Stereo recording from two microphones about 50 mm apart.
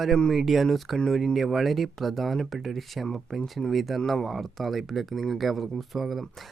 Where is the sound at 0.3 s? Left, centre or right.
Centre.